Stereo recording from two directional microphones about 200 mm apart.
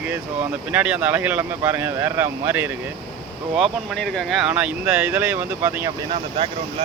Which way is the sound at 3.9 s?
Centre (ahead or behind).